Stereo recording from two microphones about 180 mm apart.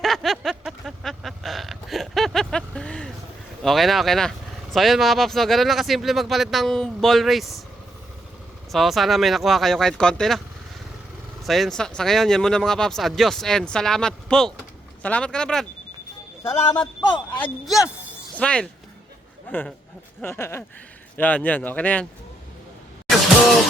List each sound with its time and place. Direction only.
0.0 s a sound: centre (ahead or behind)
3.6 s speech: centre (ahead or behind)
8.7 s speech: centre (ahead or behind)
11.4 s speech: centre (ahead or behind)
16.4 s a man's voice: 15° left (ahead or behind)
17.3 s speech: 5° left (ahead or behind)